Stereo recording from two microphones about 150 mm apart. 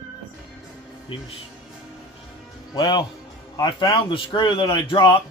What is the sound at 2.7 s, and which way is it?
A man's voice, 30° left (ahead or behind).